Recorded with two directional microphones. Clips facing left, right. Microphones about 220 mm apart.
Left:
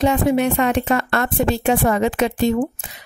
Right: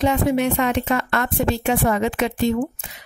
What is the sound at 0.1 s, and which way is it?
A woman's voice, 40° left (ahead or behind).